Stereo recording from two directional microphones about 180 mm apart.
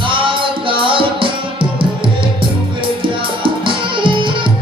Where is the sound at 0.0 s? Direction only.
30° right (ahead or behind).